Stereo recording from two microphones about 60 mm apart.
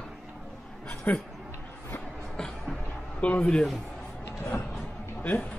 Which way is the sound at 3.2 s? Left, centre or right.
Centre.